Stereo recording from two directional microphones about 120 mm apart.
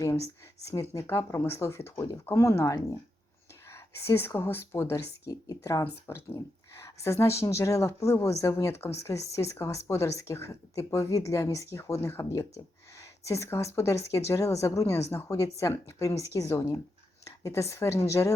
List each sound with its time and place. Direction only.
0.7 s speech: 20° left (ahead or behind)